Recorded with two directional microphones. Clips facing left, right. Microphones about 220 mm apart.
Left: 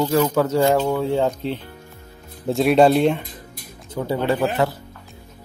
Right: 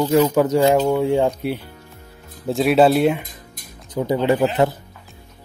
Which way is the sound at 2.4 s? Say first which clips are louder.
Even; centre (ahead or behind).